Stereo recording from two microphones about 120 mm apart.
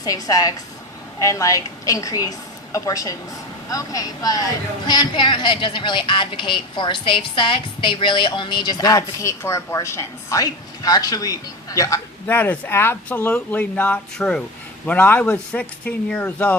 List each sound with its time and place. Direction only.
0.0 s a woman's voice: 30° left (ahead or behind)
12.3 s speech: 15° left (ahead or behind)